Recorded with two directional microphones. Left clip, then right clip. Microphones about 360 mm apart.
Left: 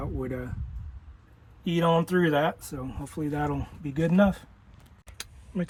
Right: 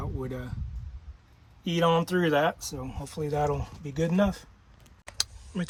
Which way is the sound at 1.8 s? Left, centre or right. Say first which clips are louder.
Left 1 dB; left.